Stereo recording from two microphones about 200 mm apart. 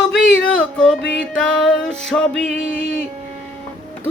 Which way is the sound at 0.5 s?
5° left (ahead or behind).